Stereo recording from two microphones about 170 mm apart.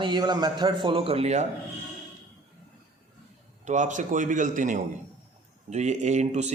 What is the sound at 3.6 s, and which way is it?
A man's voice, 45° right (ahead or behind).